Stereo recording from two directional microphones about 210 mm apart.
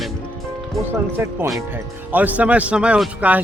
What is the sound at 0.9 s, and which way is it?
Speech, 10° right (ahead or behind).